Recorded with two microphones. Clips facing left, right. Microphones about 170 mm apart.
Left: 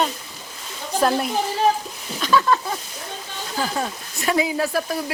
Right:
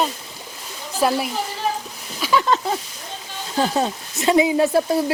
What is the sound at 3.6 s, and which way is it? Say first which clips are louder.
Speech: right 5 dB; 25° right (ahead or behind).